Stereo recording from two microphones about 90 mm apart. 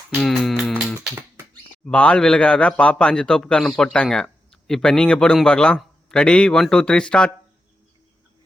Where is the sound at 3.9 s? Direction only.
10° left (ahead or behind).